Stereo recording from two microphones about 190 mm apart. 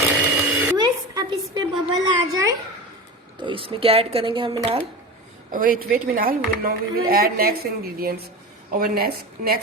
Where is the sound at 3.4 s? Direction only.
25° right (ahead or behind).